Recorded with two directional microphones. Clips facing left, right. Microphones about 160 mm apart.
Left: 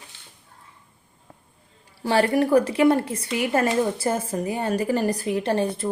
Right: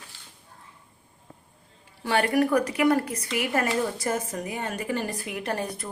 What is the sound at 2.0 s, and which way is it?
Speech, 30° left (ahead or behind).